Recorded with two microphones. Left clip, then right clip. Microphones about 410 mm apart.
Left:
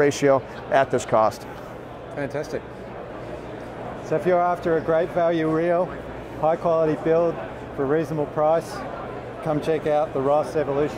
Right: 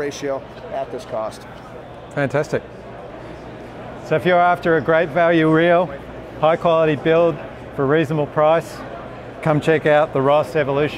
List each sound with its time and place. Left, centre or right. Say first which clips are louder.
0.0 s speech: left 6 dB; left
2.1 s a man's voice: right 8 dB; right
4.1 s speech: right 5 dB; right